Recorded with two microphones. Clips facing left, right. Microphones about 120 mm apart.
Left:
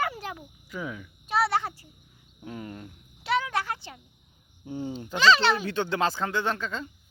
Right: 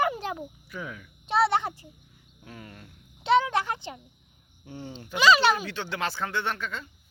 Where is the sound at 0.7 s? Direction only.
15° left (ahead or behind).